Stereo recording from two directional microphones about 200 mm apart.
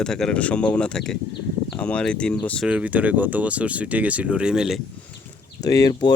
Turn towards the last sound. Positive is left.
turn(degrees=20)  # may be behind; listen again after turning